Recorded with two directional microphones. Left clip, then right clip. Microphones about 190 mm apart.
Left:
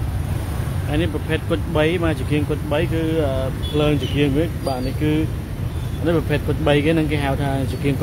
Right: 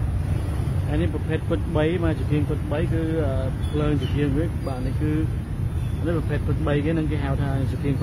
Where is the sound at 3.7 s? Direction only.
10° left (ahead or behind).